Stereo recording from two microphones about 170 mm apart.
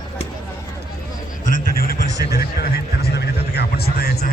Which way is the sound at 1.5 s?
65° left (ahead or behind).